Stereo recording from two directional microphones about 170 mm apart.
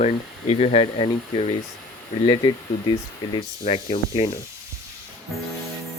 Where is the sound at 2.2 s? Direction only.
30° left (ahead or behind).